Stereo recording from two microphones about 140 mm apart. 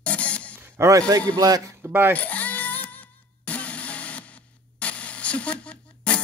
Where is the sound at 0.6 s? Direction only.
20° right (ahead or behind).